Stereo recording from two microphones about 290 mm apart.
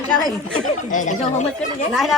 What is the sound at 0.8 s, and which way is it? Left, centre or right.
Speech, left.